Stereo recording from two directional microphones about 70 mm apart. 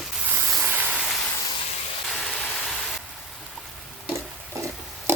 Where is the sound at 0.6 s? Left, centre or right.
Right.